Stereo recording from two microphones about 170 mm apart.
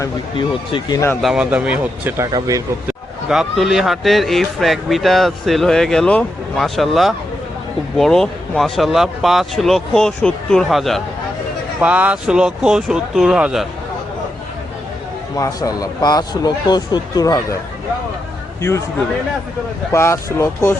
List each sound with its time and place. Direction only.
0.0 s speech: 25° left (ahead or behind)
1.2 s speech: 5° right (ahead or behind); by 2.6 s 20° right (ahead or behind)
3.2 s speech: centre (ahead or behind)
15.4 s speech: 20° left (ahead or behind)
19.9 s speech: 15° left (ahead or behind)